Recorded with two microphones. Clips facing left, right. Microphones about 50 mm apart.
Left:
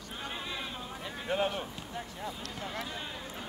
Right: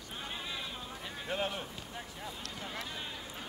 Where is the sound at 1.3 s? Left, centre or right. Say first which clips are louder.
Left 5 dB; centre.